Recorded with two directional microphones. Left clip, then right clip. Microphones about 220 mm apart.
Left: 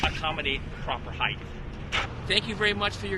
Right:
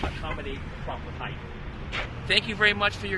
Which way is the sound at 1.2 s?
40° left (ahead or behind).